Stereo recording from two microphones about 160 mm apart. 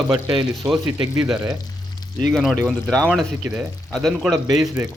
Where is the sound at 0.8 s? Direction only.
20° right (ahead or behind).